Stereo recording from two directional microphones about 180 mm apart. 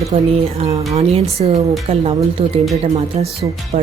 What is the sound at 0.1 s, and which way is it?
A woman's voice, 30° right (ahead or behind).